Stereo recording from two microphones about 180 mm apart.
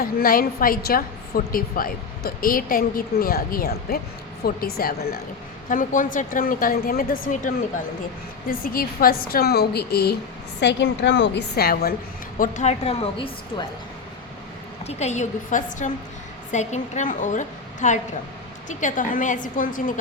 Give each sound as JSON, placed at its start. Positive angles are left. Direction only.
{"t": 0.0, "sound": "a woman's voice", "side_deg": 55}
{"t": 5.6, "sound": "a woman's voice", "side_deg": 45}
{"t": 10.6, "sound": "a woman's voice", "side_deg": 75}
{"t": 12.4, "sound": "a woman's voice", "side_deg": 40}
{"t": 14.8, "sound": "a woman's voice", "side_deg": 40}